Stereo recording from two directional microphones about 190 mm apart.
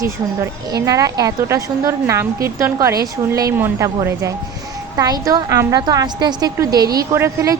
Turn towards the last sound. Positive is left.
turn(degrees=-15)  # may be behind; listen again after turning